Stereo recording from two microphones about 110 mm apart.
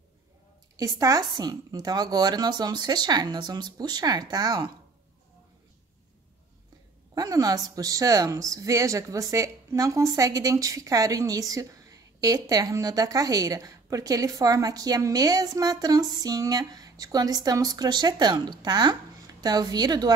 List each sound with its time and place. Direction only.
0.7 s a woman's voice: 35° right (ahead or behind)
7.2 s a woman's voice: 35° right (ahead or behind)